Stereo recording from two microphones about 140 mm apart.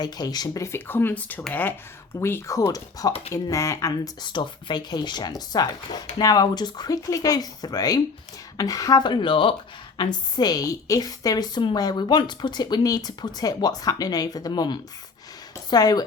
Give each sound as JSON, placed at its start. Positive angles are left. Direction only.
{"t": 0.0, "sound": "a woman's voice", "side_deg": 30}